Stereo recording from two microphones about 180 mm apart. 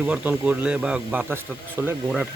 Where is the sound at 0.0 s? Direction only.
5° right (ahead or behind).